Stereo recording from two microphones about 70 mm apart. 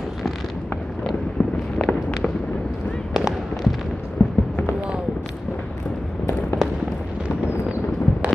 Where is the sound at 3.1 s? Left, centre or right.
Centre.